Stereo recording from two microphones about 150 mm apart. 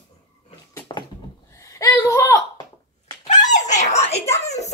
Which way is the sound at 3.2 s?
50° left (ahead or behind).